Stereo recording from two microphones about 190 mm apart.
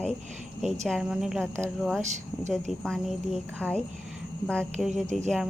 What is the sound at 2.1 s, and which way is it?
Speech, 40° right (ahead or behind).